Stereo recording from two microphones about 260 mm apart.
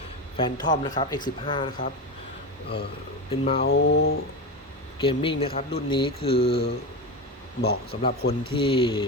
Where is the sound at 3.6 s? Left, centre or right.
Left.